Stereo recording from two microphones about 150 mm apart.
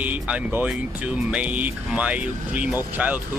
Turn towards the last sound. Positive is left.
turn(degrees=-10)  # may be behind; listen again after turning